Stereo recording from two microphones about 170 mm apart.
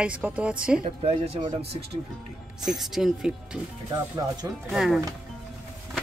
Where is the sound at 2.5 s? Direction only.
Centre (ahead or behind).